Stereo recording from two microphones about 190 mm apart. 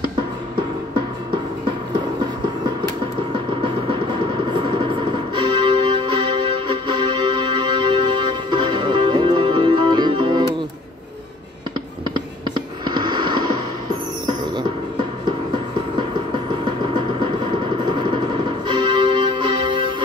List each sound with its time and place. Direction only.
3.6 s music: 25° right (ahead or behind)
12.4 s a sound: 25° right (ahead or behind)
14.2 s music: 25° right (ahead or behind)
16.6 s music: 25° right (ahead or behind)